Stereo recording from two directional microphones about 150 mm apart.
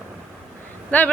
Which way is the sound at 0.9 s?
10° left (ahead or behind).